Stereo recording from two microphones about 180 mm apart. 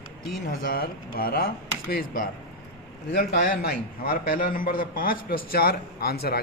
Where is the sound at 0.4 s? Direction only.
55° left (ahead or behind).